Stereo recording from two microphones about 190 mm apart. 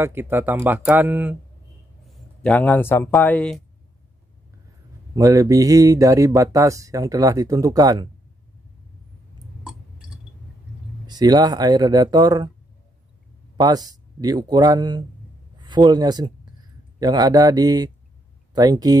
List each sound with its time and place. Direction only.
0.0 s speech: 10° right (ahead or behind)
2.0 s a man's voice: 5° left (ahead or behind)
5.1 s speech: 15° right (ahead or behind)
9.6 s a sound: 5° right (ahead or behind)
11.1 s speech: 20° right (ahead or behind)
13.6 s speech: 20° right (ahead or behind)